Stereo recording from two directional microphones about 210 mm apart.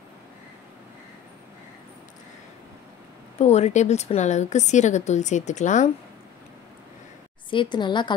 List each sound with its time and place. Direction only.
3.3 s a woman's voice: 30° left (ahead or behind)
7.5 s a woman's voice: 20° left (ahead or behind)